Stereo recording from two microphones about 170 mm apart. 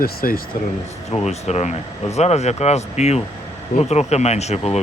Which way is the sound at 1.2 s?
40° left (ahead or behind).